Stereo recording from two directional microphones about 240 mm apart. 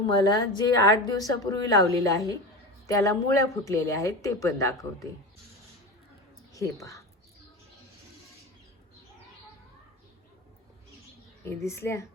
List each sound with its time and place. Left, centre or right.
0.1 s a woman's voice: centre
6.5 s speech: centre
11.4 s a woman's voice: centre